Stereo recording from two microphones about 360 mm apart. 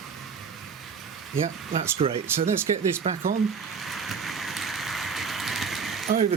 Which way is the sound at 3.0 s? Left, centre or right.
Centre.